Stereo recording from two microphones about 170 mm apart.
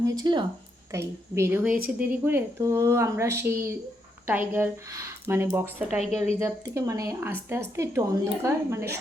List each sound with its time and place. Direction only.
0.0 s a woman's voice: 25° right (ahead or behind)